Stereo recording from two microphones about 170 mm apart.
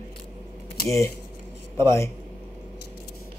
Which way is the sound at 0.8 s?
20° left (ahead or behind).